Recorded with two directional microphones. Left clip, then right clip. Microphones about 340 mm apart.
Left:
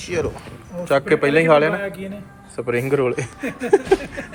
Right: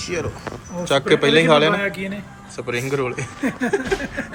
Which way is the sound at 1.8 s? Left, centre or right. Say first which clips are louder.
Right 4 dB; right.